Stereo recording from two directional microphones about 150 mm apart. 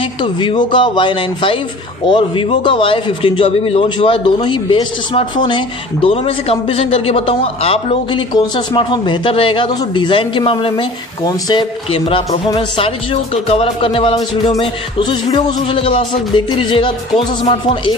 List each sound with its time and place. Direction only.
0.2 s a man's voice: 30° left (ahead or behind)
11.9 s a man's voice: 40° left (ahead or behind)